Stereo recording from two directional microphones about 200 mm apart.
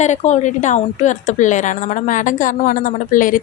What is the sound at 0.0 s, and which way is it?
Speech, 35° left (ahead or behind).